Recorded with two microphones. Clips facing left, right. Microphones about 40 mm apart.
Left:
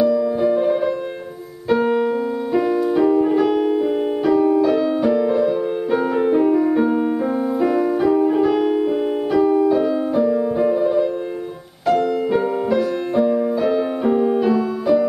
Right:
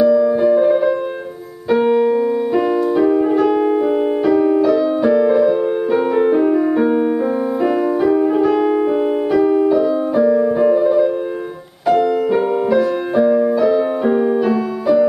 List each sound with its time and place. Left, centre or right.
0.0 s music: centre
2.0 s music: centre
5.0 s music: centre
10.1 s piano: centre
12.3 s music: centre